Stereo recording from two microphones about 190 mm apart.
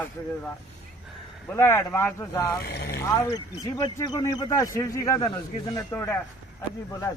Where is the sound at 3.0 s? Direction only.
15° left (ahead or behind).